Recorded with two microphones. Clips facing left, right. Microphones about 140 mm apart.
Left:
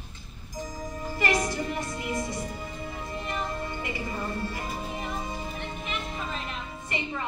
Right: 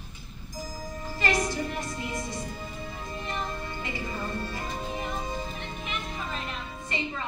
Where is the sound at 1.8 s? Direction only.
25° left (ahead or behind).